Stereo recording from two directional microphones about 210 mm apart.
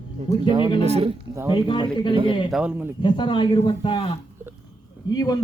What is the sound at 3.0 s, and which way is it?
A man's voice, 20° left (ahead or behind).